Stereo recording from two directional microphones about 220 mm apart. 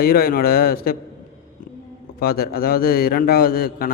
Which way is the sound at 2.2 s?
45° left (ahead or behind).